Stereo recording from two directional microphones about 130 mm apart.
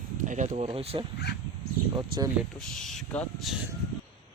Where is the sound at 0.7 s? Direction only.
45° right (ahead or behind).